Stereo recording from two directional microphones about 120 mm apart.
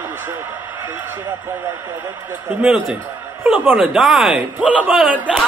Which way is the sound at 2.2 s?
10° right (ahead or behind).